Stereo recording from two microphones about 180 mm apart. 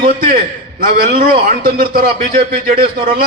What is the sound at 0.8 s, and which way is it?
A man's voice, 50° right (ahead or behind).